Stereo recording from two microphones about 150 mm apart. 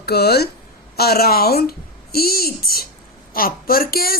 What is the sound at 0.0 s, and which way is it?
Speech, 90° left.